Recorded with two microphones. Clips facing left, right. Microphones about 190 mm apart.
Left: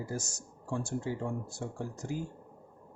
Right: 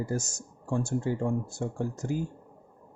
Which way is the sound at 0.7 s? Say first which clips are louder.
Right 5 dB; 50° right (ahead or behind).